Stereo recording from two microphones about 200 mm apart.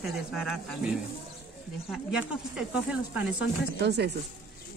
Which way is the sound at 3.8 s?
55° right (ahead or behind).